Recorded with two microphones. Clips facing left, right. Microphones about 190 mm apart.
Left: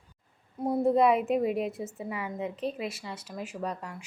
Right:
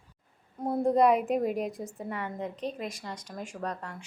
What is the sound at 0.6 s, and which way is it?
A woman's voice, 5° left (ahead or behind).